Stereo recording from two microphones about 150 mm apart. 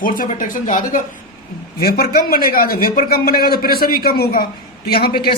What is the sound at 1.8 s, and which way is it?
A man's voice, 90° left.